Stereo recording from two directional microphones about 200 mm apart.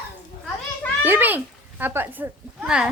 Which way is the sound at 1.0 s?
10° right (ahead or behind).